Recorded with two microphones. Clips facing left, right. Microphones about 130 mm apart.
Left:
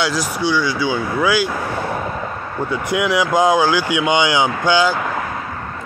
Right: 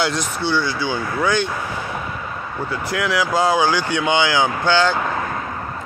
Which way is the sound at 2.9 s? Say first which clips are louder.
Left 3 dB; 20° left (ahead or behind).